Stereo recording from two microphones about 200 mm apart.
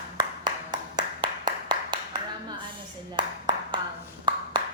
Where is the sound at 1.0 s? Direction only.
20° right (ahead or behind).